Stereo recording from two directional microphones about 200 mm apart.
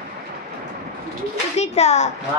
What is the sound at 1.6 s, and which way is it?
Speech, 35° left (ahead or behind).